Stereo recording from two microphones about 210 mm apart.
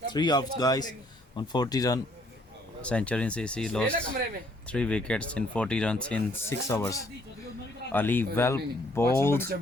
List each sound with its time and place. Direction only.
0.1 s a man's voice: 20° left (ahead or behind)
2.8 s speech: 5° left (ahead or behind)